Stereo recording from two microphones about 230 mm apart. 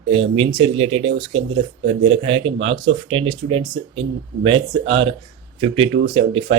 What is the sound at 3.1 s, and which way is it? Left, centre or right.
Speech, right.